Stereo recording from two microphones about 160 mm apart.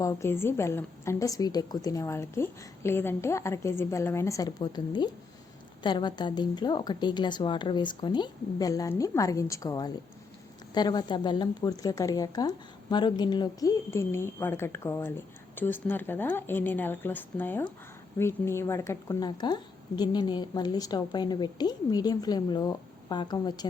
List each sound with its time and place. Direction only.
0.0 s a woman's voice: 20° left (ahead or behind)